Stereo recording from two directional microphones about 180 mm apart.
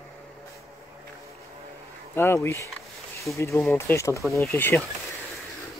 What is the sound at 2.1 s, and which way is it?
Speech, 15° left (ahead or behind).